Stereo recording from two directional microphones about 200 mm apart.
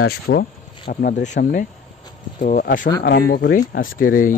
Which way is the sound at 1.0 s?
40° left (ahead or behind).